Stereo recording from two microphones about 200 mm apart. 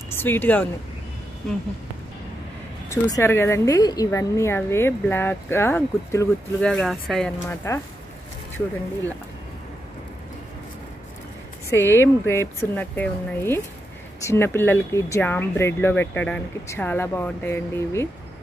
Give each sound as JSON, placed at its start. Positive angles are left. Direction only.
{"t": 0.1, "sound": "speech", "side_deg": 10}
{"t": 2.9, "sound": "a woman's voice", "side_deg": 15}
{"t": 7.4, "sound": "a woman's voice", "side_deg": 15}
{"t": 11.7, "sound": "a woman's voice", "side_deg": 10}